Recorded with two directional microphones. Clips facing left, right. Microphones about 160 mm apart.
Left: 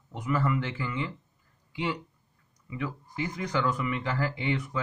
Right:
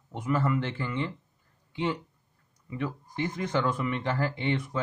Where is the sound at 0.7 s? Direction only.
50° right (ahead or behind).